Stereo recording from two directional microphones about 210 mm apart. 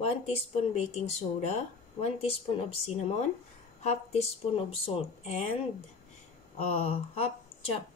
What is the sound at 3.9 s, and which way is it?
Speech, 30° left (ahead or behind).